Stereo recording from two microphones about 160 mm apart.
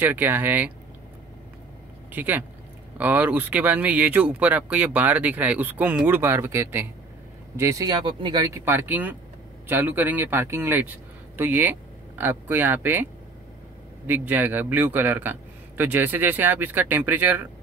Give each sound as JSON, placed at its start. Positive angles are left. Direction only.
{"t": 0.0, "sound": "speech", "side_deg": -10}
{"t": 2.1, "sound": "speech", "side_deg": -10}
{"t": 8.5, "sound": "speech", "side_deg": -15}